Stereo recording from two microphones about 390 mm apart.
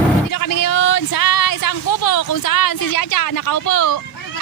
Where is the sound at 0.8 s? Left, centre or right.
Left.